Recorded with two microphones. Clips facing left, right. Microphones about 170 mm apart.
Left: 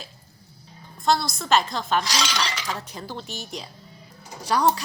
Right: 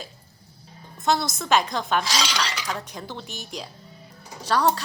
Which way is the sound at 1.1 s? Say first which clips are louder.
Even; 20° right (ahead or behind).